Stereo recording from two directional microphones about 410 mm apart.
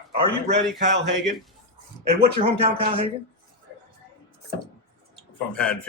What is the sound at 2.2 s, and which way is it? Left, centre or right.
Speech, centre.